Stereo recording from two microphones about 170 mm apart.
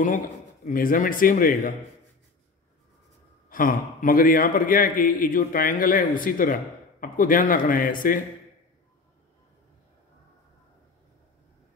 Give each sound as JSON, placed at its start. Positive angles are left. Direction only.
{"t": 0.7, "sound": "a man's voice", "side_deg": 55}
{"t": 3.4, "sound": "a man's voice", "side_deg": 55}